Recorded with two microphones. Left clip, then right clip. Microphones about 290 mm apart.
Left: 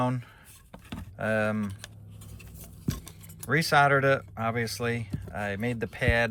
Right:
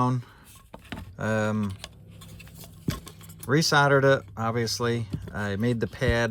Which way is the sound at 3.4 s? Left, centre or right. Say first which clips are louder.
Right 1 dB; centre.